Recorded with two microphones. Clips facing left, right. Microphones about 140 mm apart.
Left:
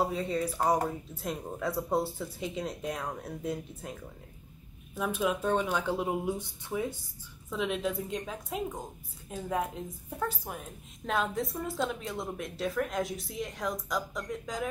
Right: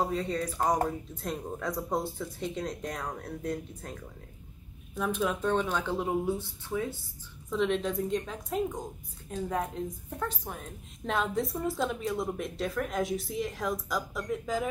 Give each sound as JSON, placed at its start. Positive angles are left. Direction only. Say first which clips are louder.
{"t": 0.0, "sound": "speech", "louder": "even", "side_deg": 10}
{"t": 7.4, "sound": "speech", "louder": "right 3 dB", "side_deg": 5}